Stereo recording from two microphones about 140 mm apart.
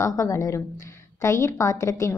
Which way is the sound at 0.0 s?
25° left (ahead or behind).